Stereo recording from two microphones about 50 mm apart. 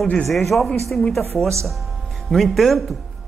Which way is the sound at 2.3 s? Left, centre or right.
Centre.